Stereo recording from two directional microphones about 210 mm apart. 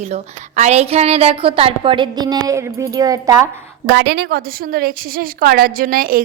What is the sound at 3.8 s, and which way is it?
A woman's voice, 55° right (ahead or behind).